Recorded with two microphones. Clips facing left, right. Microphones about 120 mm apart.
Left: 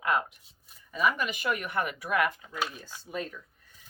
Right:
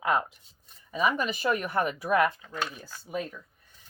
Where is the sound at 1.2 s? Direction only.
35° right (ahead or behind).